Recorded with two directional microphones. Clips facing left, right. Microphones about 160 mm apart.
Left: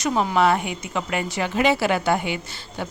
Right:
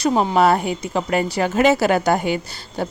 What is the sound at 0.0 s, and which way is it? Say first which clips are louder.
A woman's voice: right 4 dB; 30° right (ahead or behind).